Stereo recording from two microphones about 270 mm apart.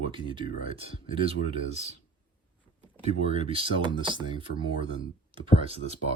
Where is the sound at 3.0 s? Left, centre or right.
Right.